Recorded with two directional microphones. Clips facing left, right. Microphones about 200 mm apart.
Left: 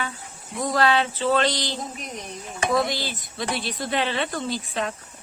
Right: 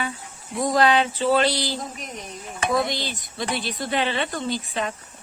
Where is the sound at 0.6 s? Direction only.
15° right (ahead or behind).